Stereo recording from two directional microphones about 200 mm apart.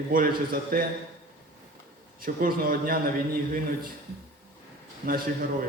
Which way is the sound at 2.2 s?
45° right (ahead or behind).